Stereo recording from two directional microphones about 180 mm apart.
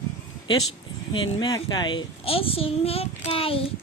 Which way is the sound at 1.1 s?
25° left (ahead or behind).